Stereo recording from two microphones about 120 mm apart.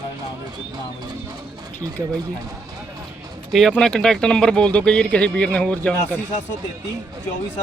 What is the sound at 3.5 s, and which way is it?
Speech, 5° left (ahead or behind).